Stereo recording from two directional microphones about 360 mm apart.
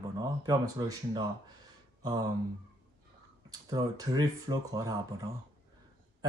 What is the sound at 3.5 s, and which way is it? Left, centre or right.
Speech, centre.